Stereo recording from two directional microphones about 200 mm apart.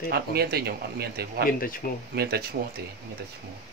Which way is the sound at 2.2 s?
50° right (ahead or behind).